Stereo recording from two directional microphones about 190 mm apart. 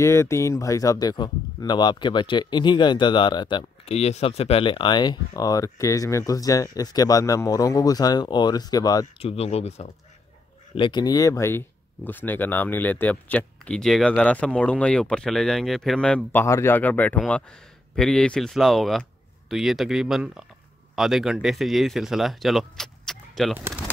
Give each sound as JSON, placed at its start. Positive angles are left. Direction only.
{"t": 0.0, "sound": "speech", "side_deg": 15}
{"t": 9.2, "sound": "speech", "side_deg": 30}